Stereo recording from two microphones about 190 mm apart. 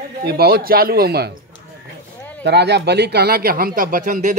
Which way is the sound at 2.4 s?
60° right (ahead or behind).